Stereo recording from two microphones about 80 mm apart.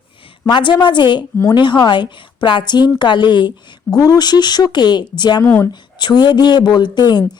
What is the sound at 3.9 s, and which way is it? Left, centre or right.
Speech, left.